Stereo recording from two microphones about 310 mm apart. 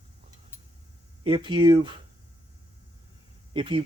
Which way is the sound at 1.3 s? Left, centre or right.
Centre.